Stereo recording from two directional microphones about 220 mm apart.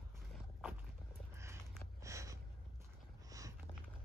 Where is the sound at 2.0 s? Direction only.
15° right (ahead or behind).